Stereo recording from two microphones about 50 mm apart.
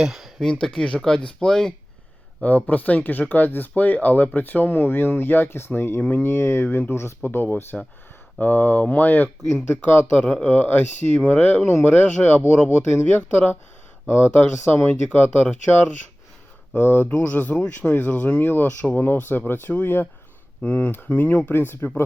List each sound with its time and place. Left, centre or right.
0.0 s speech: centre
0.6 s speech: centre
2.4 s speech: left
6.0 s speech: left
6.2 s speech: left
7.7 s speech: centre
8.4 s speech: left
11.6 s speech: left
12.4 s speech: left
13.1 s speech: left
14.6 s speech: left
17.1 s speech: left
20.6 s speech: left
21.4 s speech: left